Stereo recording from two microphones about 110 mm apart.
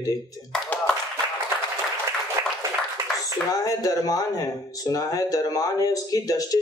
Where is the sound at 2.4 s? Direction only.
35° right (ahead or behind).